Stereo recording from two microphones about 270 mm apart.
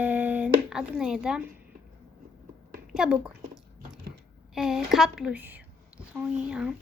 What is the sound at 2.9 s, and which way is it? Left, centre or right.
Speech, centre.